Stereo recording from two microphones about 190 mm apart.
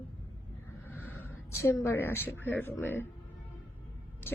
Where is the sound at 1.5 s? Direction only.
15° left (ahead or behind).